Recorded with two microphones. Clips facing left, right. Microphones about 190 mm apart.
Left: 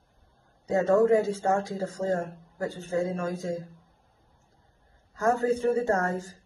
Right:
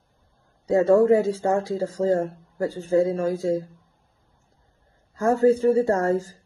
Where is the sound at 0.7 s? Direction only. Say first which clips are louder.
Right 5 dB; 35° right (ahead or behind).